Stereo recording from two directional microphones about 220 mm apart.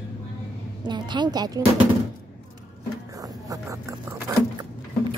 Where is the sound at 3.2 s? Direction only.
15° right (ahead or behind).